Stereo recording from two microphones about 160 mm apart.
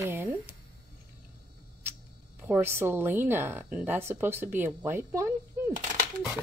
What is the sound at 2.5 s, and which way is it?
A woman's voice, 15° right (ahead or behind).